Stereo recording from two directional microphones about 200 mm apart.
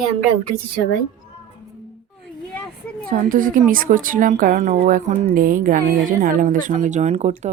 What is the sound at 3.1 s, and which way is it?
Speech, 45° right (ahead or behind).